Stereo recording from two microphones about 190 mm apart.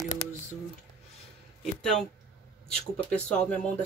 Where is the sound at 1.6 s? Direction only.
Centre (ahead or behind).